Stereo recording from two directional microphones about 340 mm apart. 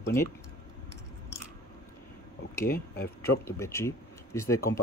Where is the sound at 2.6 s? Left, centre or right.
Left.